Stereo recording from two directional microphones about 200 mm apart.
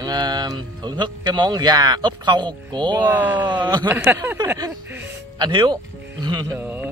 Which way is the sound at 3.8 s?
10° right (ahead or behind).